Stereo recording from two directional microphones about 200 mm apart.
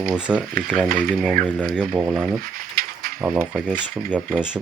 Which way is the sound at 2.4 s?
45° right (ahead or behind).